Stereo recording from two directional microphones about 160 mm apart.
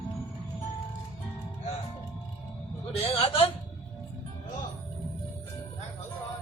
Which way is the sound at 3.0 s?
35° left (ahead or behind).